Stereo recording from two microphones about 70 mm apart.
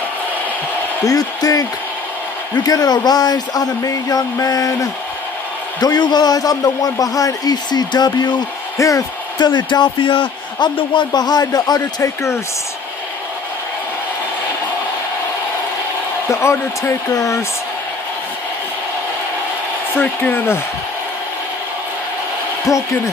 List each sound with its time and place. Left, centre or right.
1.0 s speech: left
5.8 s a man's voice: left
8.7 s speech: left
9.4 s a man's voice: left
12.0 s speech: left
16.3 s speech: left
19.9 s speech: left
22.7 s speech: left